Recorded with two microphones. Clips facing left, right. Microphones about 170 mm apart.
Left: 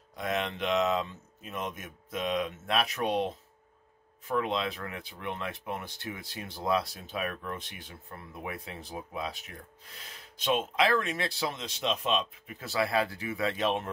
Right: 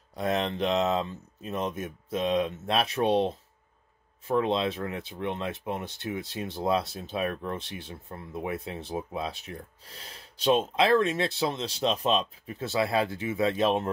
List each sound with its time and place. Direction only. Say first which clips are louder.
0.1 s speech: right 4 dB; 35° right (ahead or behind)